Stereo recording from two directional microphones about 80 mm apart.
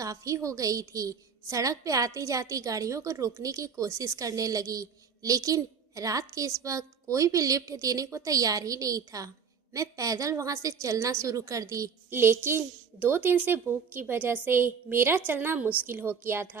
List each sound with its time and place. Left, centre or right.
0.0 s a woman's voice: right
12.1 s speech: right